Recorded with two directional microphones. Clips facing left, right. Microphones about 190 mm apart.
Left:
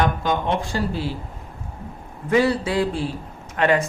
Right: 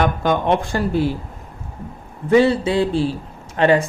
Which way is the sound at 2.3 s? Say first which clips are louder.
Right 5 dB; 25° right (ahead or behind).